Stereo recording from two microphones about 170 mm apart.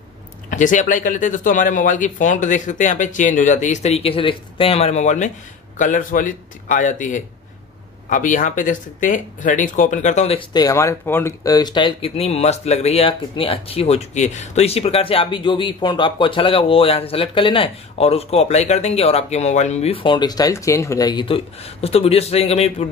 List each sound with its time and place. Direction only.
0.5 s speech: 50° left (ahead or behind)
10.5 s speech: 20° left (ahead or behind); by 22.8 s 40° left (ahead or behind)